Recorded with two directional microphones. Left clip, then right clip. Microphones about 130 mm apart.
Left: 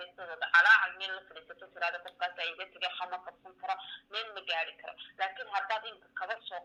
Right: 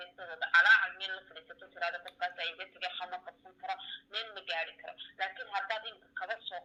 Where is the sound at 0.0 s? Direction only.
35° left (ahead or behind).